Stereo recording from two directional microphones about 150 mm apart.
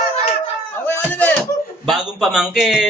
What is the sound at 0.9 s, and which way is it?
Speech, 15° left (ahead or behind).